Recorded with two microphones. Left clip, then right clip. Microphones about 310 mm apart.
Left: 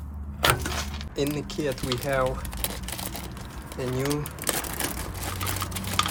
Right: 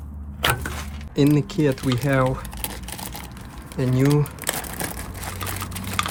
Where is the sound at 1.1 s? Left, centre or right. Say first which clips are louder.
Right 9 dB; right.